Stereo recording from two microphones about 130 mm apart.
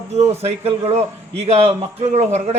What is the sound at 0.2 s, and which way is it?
A man's voice, 55° right (ahead or behind).